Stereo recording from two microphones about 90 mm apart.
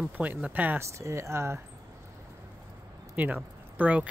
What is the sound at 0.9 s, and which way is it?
Speech, 35° right (ahead or behind).